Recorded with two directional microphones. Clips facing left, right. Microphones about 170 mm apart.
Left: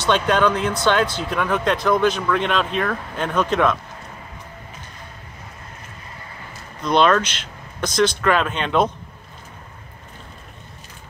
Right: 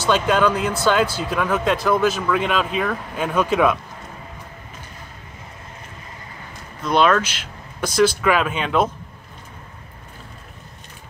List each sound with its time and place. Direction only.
0.0 s speech: 5° right (ahead or behind)
6.8 s speech: 5° right (ahead or behind)